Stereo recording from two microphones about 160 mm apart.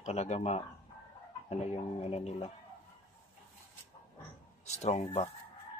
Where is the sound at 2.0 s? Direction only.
40° left (ahead or behind).